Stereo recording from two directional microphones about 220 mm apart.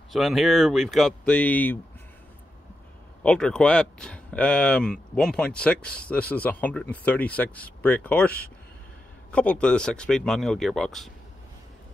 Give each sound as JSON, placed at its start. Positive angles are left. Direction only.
{"t": 0.1, "sound": "speech", "side_deg": 0}
{"t": 3.3, "sound": "speech", "side_deg": 5}